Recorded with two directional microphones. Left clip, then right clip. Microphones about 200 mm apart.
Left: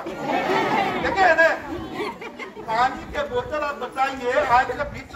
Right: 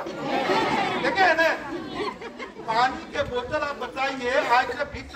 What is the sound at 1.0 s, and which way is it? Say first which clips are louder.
Speech: left 3 dB; 5° left (ahead or behind).